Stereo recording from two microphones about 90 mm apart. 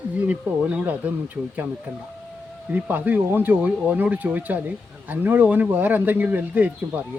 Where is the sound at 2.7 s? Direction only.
20° right (ahead or behind).